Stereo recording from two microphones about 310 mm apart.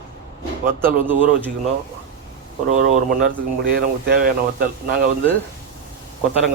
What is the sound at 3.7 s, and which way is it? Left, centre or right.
Speech, right.